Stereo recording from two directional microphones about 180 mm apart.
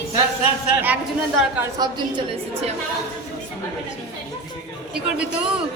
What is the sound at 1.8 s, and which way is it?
Speech, 25° right (ahead or behind).